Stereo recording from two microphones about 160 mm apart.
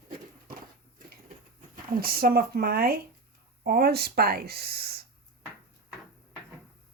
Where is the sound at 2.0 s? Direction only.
70° right (ahead or behind).